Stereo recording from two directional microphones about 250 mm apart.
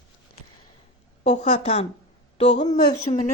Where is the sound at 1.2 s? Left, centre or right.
Left.